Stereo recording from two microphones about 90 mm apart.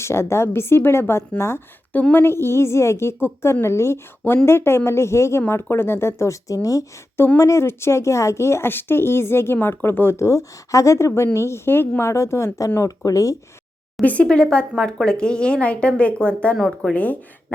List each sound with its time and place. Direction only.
0.0 s a woman's voice: 30° left (ahead or behind)
1.9 s a woman's voice: 20° left (ahead or behind)
13.1 s speech: 35° left (ahead or behind)
14.0 s speech: 15° left (ahead or behind)
16.6 s speech: centre (ahead or behind)
16.9 s speech: 15° left (ahead or behind)